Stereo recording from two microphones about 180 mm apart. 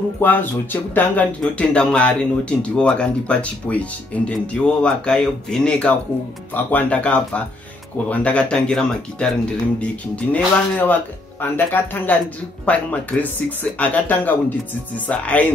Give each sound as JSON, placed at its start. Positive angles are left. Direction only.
{"t": 0.2, "sound": "speech", "side_deg": 10}